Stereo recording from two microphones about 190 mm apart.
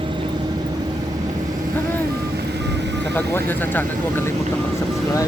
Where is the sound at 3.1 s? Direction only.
10° left (ahead or behind).